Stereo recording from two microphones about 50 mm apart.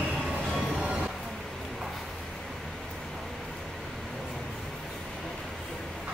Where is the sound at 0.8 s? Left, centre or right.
Centre.